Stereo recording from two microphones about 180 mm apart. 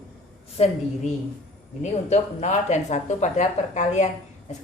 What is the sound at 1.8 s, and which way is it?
Speech, 40° left (ahead or behind).